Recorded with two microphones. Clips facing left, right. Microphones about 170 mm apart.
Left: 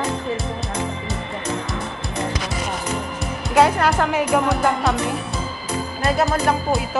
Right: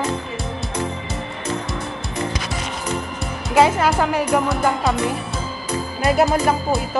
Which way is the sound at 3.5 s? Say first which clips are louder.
Right 1 dB; centre (ahead or behind).